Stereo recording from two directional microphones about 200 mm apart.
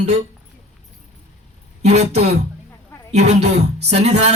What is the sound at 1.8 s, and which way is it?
A man's voice, 35° right (ahead or behind).